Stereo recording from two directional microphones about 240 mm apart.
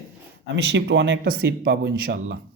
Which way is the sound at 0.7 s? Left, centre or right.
Right.